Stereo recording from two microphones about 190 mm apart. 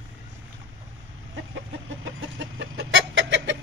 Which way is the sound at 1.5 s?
80° right.